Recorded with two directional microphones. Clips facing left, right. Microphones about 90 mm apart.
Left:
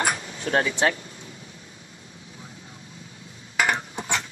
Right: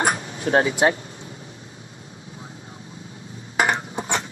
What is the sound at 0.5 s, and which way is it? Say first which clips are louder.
Speech: right 4 dB; 25° right (ahead or behind).